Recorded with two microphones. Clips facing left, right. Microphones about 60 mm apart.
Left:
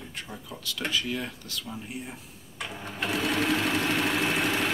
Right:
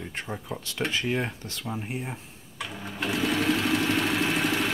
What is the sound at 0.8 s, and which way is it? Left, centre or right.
Speech, right.